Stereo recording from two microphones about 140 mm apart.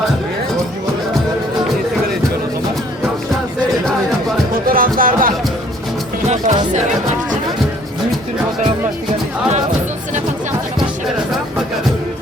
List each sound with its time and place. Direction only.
4.6 s music: 90° right
6.2 s music: 60° right (ahead or behind)